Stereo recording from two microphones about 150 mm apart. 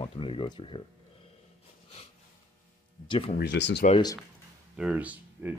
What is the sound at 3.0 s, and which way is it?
Speech, 35° left (ahead or behind).